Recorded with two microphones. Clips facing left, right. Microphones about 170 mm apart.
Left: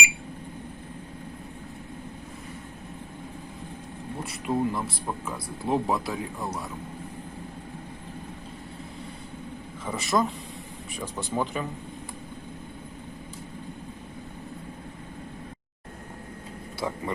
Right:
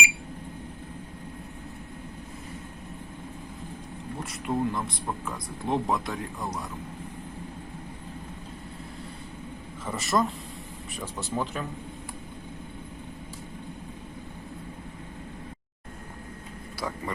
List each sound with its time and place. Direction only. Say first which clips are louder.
4.2 s speech: left 1 dB; 5° left (ahead or behind)
9.8 s speech: left 1 dB; centre (ahead or behind)
16.8 s a sound: left 3 dB; 20° left (ahead or behind)